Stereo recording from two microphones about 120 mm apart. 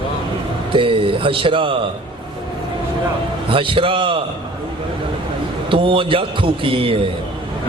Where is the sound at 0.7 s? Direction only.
45° right (ahead or behind).